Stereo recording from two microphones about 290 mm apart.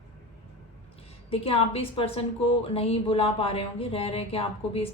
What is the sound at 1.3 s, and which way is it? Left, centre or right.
A woman's voice, centre.